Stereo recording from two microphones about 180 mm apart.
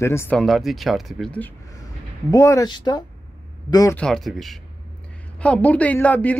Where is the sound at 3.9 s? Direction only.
5° left (ahead or behind).